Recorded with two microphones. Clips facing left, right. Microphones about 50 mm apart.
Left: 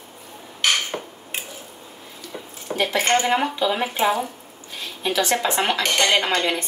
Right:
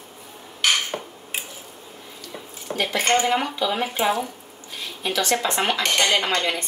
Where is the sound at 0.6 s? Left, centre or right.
Centre.